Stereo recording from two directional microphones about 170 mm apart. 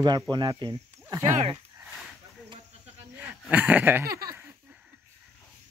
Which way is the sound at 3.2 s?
10° right (ahead or behind).